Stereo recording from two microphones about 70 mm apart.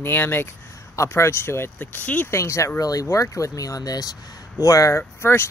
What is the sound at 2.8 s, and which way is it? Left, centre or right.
Speech, left.